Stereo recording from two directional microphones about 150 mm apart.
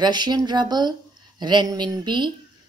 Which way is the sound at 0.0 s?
30° right (ahead or behind).